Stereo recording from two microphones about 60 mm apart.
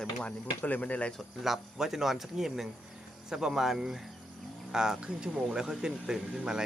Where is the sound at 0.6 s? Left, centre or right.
Left.